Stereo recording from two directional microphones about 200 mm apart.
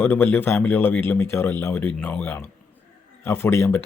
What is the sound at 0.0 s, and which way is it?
Speech, 10° left (ahead or behind).